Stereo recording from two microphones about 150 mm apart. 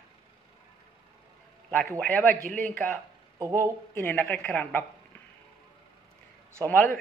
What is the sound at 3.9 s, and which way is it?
Speech, 15° left (ahead or behind).